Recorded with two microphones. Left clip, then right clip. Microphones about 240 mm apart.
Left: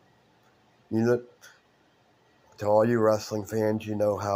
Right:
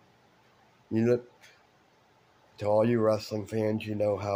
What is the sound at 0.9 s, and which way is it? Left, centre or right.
Speech, centre.